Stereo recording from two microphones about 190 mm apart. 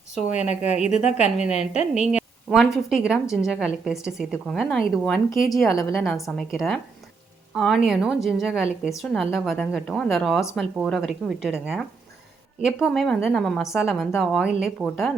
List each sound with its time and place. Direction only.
0.2 s a woman's voice: 35° left (ahead or behind)
2.1 s a sound: 5° right (ahead or behind)
2.7 s a woman's voice: 5° right (ahead or behind)